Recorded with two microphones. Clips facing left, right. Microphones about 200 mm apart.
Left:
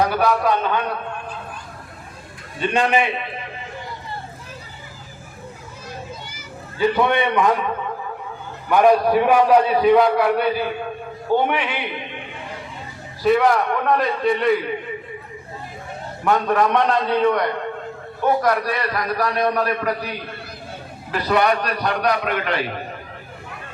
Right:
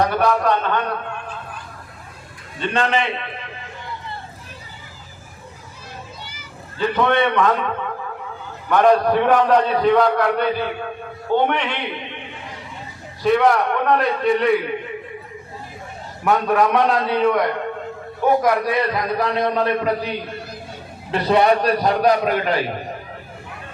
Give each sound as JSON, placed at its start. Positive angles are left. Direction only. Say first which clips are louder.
{"t": 0.2, "sound": "a man's voice", "louder": "right 1 dB", "side_deg": 5}
{"t": 2.6, "sound": "a man's voice", "louder": "left 2 dB", "side_deg": 10}
{"t": 6.7, "sound": "a man's voice", "louder": "even", "side_deg": 10}
{"t": 8.7, "sound": "a man's voice", "louder": "even", "side_deg": 10}
{"t": 13.2, "sound": "a man's voice", "louder": "even", "side_deg": 0}
{"t": 16.2, "sound": "a man's voice", "louder": "right 1 dB", "side_deg": -5}
{"t": 18.4, "sound": "a man's voice", "louder": "right 2 dB", "side_deg": -15}